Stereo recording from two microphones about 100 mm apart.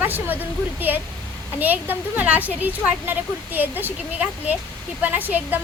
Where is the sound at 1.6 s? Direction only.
15° right (ahead or behind).